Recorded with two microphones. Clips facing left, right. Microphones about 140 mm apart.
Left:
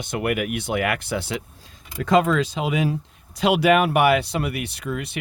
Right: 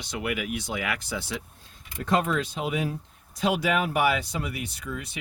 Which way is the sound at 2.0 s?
90° left.